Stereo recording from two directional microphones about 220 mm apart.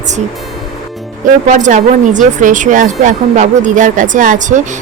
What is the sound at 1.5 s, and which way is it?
A woman's voice, 35° right (ahead or behind).